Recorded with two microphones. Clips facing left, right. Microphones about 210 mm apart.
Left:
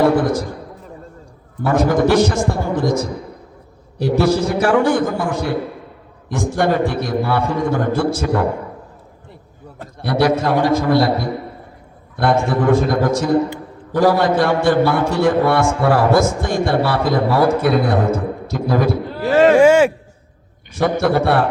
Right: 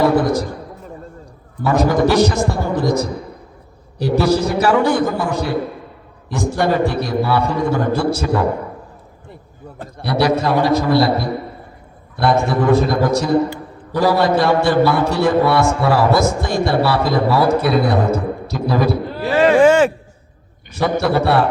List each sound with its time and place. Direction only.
1.6 s a man's voice: 50° left (ahead or behind)
4.6 s a man's voice: 50° left (ahead or behind)
10.0 s a man's voice: 50° left (ahead or behind)
19.5 s a sound: 10° left (ahead or behind)
20.7 s a man's voice: 50° left (ahead or behind)